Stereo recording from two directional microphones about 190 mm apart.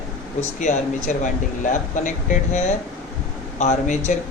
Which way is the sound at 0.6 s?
40° left (ahead or behind).